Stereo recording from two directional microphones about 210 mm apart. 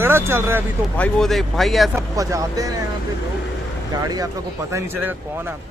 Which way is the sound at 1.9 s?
15° right (ahead or behind).